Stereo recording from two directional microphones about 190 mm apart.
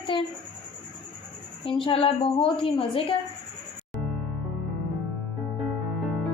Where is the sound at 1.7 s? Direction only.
25° left (ahead or behind).